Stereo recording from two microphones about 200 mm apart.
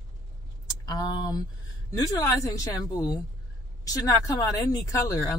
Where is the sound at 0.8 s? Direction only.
20° left (ahead or behind).